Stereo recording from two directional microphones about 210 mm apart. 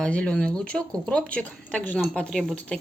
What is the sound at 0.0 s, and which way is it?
Speech, 5° left (ahead or behind).